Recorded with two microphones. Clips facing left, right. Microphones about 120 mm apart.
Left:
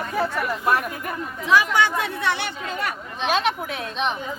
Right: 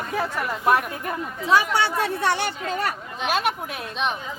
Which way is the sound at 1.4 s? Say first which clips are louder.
Left 1 dB; 35° right (ahead or behind).